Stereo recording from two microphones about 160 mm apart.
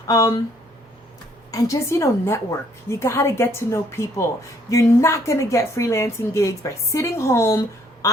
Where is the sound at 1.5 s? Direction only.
20° left (ahead or behind).